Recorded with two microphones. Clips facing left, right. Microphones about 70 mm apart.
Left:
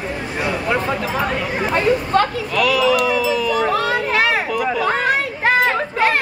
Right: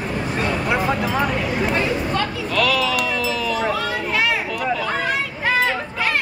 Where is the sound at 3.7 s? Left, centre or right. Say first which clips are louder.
Left 4 dB; left.